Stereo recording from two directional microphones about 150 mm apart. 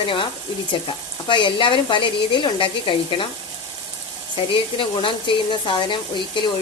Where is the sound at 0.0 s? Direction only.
35° left (ahead or behind).